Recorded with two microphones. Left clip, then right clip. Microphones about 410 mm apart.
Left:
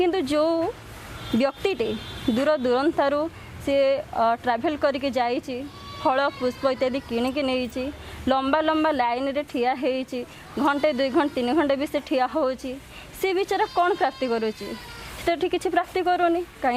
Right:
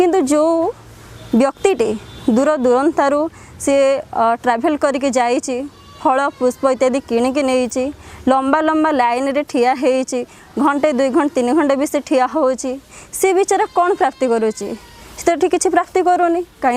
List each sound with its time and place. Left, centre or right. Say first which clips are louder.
0.0 s a woman's voice: right 8 dB; right